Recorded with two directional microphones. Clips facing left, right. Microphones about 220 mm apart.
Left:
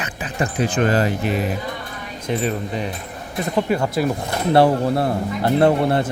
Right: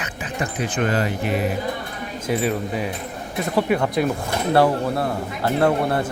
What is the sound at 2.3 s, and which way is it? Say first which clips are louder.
Speech: even; 10° right (ahead or behind).